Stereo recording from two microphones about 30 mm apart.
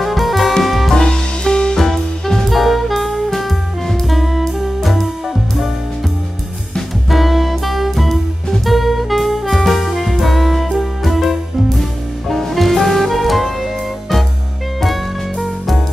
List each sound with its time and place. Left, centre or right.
0.0 s music: centre
0.9 s music: left
1.9 s music: centre
2.5 s music: centre
4.1 s jazz: centre
7.1 s music: centre
8.6 s saxophone: centre
9.7 s music: centre
15.4 s music: centre